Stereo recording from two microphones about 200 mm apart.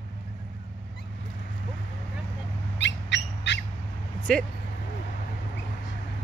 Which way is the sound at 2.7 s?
60° left (ahead or behind).